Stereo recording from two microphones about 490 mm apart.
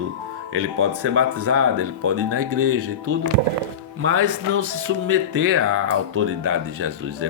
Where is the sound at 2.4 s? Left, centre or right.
Right.